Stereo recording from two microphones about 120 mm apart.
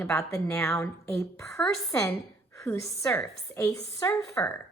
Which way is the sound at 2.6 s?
25° left (ahead or behind).